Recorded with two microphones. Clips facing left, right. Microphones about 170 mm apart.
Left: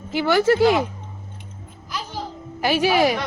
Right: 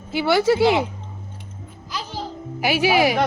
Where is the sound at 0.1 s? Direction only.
15° right (ahead or behind).